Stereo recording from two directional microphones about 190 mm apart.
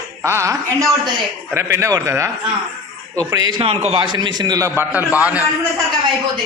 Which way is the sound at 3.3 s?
20° right (ahead or behind).